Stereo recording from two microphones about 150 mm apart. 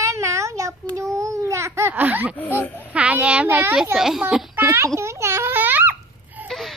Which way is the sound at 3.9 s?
5° right (ahead or behind).